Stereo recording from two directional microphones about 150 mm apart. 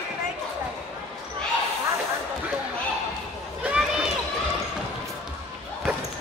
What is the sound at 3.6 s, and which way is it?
Run, 5° right (ahead or behind).